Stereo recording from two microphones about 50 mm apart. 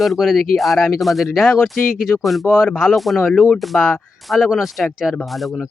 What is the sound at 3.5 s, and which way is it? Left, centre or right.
Speech, centre.